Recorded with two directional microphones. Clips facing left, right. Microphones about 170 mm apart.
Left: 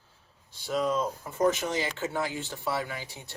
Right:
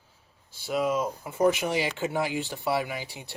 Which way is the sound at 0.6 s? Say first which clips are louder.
Right 1 dB; 5° right (ahead or behind).